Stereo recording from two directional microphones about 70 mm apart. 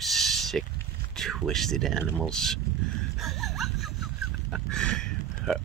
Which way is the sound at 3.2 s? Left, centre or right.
Centre.